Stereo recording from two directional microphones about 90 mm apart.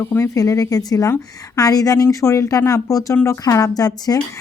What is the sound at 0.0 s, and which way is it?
Speech, 30° left (ahead or behind).